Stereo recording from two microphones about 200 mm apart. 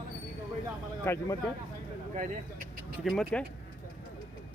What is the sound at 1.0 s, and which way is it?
Speech, 10° left (ahead or behind).